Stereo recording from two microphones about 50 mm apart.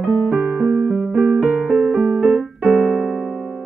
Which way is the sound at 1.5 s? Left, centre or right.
Right.